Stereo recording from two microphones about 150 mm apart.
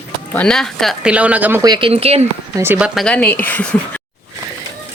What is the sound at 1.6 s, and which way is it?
Speech, 30° right (ahead or behind).